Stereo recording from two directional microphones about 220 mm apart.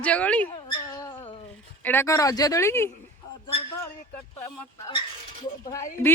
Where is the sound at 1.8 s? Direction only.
10° left (ahead or behind).